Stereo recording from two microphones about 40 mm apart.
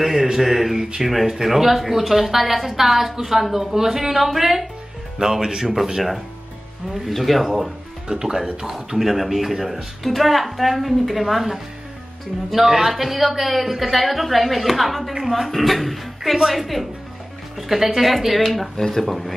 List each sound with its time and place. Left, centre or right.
0.0 s a woman's voice: centre
5.2 s speech: centre
6.9 s a woman's voice: centre
8.1 s speech: centre
8.7 s a woman's voice: centre